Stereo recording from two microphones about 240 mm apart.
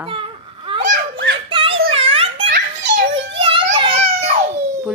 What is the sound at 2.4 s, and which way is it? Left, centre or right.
Children playing, right.